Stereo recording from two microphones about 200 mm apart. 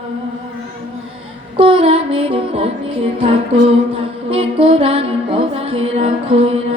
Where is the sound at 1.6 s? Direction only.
25° right (ahead or behind).